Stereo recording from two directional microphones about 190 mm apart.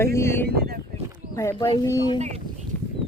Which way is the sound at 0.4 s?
55° right (ahead or behind).